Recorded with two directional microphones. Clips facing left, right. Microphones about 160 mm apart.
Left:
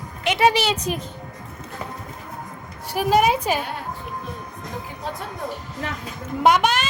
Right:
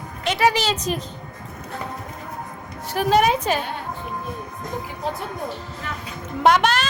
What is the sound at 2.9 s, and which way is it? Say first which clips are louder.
Speech: even; 10° left (ahead or behind).